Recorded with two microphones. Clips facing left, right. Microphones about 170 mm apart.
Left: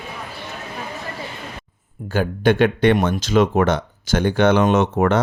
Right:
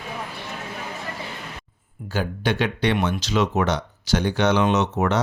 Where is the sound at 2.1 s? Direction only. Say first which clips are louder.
Left 7 dB; 55° left (ahead or behind).